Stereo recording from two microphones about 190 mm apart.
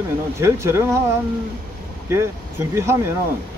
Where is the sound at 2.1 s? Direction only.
15° right (ahead or behind).